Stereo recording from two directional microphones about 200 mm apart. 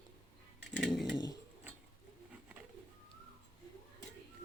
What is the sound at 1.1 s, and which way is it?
Bird, 20° left (ahead or behind).